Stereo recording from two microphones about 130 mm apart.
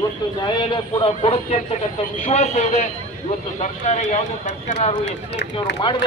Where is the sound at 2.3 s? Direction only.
60° left (ahead or behind).